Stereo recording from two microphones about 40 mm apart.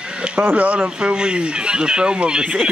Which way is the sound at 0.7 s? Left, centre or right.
Right.